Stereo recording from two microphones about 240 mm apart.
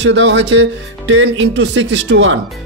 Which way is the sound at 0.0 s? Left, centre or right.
Right.